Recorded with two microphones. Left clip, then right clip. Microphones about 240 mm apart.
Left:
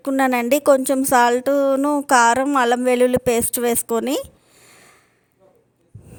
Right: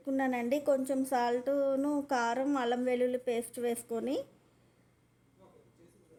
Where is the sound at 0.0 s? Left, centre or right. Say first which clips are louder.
Left 14 dB; left.